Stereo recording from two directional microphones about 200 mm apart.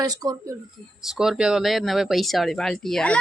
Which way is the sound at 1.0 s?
Centre (ahead or behind).